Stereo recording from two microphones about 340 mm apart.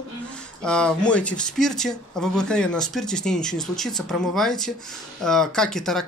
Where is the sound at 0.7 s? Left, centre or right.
Centre.